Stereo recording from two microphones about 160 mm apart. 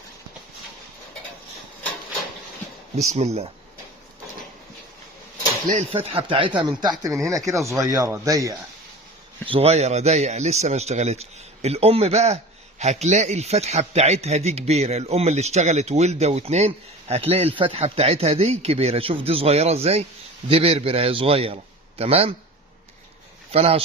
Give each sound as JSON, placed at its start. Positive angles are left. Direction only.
{"t": 2.9, "sound": "speech", "side_deg": -45}
{"t": 5.9, "sound": "speech", "side_deg": -35}
{"t": 9.5, "sound": "a man's voice", "side_deg": -40}
{"t": 23.5, "sound": "speech", "side_deg": -40}